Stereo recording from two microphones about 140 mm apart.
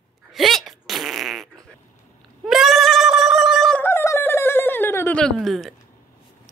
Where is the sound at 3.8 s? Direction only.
20° left (ahead or behind).